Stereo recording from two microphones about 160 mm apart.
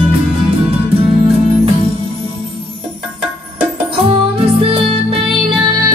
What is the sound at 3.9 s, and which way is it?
Music, 35° right (ahead or behind).